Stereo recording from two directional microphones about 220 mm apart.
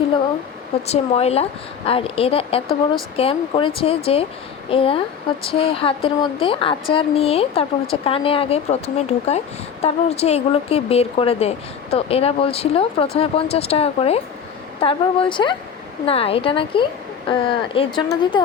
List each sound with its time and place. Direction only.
0.9 s speech: 30° left (ahead or behind)